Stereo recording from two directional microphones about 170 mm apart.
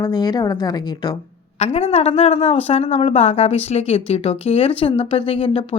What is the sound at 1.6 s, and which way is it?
A woman's voice, 40° left (ahead or behind).